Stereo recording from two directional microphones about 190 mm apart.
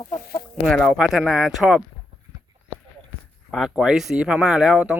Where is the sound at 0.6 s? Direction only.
Centre (ahead or behind).